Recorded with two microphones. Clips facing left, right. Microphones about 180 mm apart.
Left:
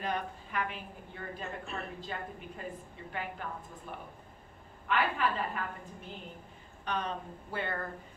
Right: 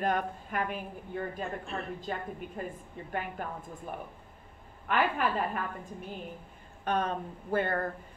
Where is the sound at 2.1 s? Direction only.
50° right (ahead or behind).